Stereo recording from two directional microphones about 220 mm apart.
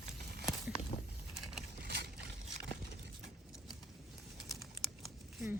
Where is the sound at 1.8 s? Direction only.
50° right (ahead or behind).